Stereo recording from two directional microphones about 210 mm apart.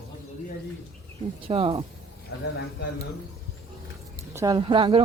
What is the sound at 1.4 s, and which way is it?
Speech, 30° right (ahead or behind).